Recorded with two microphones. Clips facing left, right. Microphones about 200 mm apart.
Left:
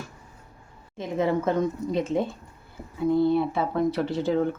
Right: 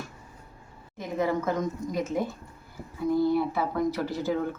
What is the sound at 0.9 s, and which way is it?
Speech, 25° left (ahead or behind).